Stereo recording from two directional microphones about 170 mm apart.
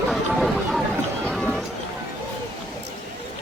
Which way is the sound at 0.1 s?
Centre (ahead or behind).